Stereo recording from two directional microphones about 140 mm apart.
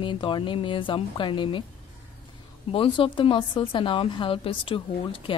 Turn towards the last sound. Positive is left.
turn(degrees=35)  # may be behind; listen again after turning